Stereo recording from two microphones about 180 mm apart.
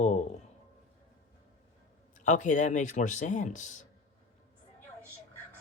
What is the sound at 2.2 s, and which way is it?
Speech, 45° left (ahead or behind).